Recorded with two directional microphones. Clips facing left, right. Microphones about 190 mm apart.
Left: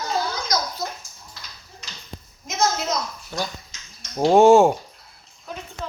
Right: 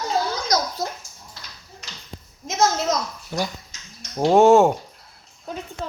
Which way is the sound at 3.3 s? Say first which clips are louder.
Right 3 dB; 15° right (ahead or behind).